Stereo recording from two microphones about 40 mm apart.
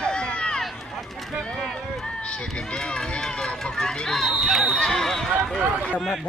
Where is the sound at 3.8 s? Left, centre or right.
Centre.